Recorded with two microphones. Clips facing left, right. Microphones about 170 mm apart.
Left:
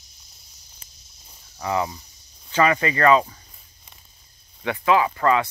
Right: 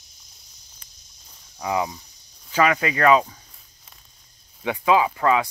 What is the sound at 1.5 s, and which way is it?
Cricket, 5° right (ahead or behind).